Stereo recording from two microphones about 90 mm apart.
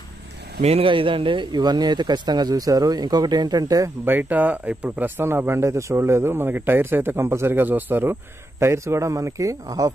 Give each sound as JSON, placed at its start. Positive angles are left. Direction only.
{"t": 0.7, "sound": "speech", "side_deg": -75}
{"t": 4.0, "sound": "a man's voice", "side_deg": -20}